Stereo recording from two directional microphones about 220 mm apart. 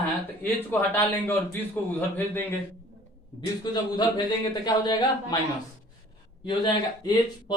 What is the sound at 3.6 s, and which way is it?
A man's voice, 20° left (ahead or behind).